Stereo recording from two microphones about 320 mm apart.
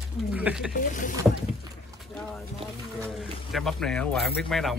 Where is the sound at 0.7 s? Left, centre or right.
Left.